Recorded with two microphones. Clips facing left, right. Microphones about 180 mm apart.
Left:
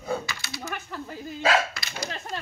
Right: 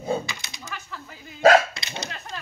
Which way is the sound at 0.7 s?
45° left (ahead or behind).